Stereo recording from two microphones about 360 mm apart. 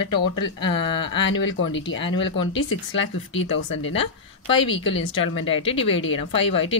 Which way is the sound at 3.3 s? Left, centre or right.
Left.